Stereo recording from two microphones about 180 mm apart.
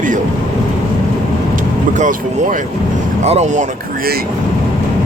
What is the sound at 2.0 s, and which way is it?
Speech, 45° right (ahead or behind).